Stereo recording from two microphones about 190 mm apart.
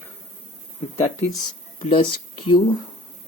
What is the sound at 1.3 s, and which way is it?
Speech, 25° left (ahead or behind).